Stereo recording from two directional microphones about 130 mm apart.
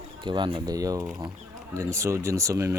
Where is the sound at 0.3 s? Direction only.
40° right (ahead or behind).